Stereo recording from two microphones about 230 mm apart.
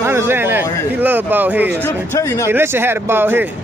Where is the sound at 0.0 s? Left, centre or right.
Centre.